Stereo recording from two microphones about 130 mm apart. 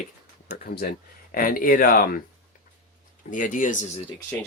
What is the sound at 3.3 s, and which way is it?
Speech, 90° left.